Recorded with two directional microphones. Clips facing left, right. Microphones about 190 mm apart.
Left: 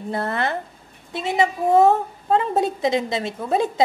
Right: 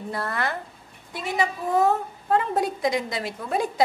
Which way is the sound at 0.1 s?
25° left (ahead or behind).